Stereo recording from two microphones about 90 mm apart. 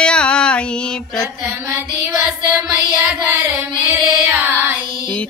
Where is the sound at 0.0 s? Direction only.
10° left (ahead or behind).